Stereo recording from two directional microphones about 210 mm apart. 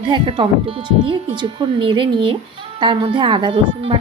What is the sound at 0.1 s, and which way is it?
Speech, 25° right (ahead or behind).